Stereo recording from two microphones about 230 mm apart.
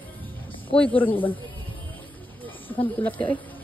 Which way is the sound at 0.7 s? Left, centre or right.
Centre.